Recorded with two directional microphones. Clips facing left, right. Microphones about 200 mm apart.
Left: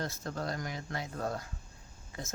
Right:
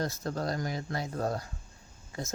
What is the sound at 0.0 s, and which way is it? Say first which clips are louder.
Speech: right 4 dB; 40° right (ahead or behind).